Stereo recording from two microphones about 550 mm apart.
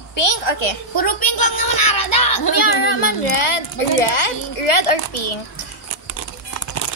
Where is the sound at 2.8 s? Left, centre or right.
Left.